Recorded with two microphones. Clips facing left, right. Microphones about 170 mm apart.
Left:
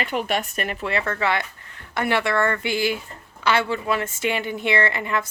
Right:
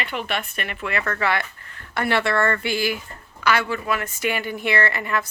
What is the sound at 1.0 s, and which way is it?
A woman's voice, 15° left (ahead or behind).